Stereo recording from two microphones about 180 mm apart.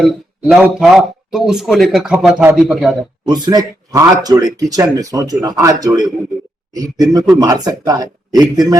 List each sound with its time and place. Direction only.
0.0 s a man's voice: centre (ahead or behind)
3.2 s speech: 25° right (ahead or behind)